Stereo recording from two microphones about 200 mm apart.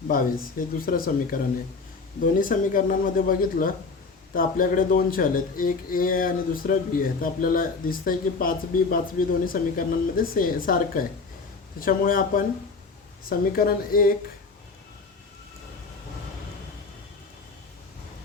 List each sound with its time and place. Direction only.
0.1 s speech: 45° left (ahead or behind)